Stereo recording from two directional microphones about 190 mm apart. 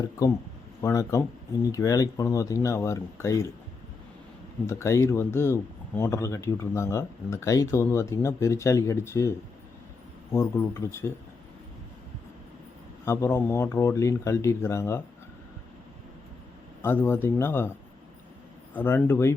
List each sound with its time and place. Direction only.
0.2 s speech: 20° left (ahead or behind)
4.6 s speech: 15° left (ahead or behind)
10.3 s speech: 15° left (ahead or behind)
13.1 s speech: 15° left (ahead or behind)
16.8 s speech: 10° left (ahead or behind)
18.7 s speech: 10° left (ahead or behind)